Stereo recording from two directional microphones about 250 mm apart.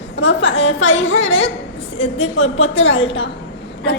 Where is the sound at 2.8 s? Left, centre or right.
Left.